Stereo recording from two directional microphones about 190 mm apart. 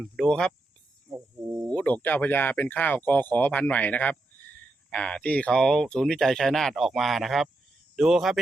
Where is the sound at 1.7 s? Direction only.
10° left (ahead or behind).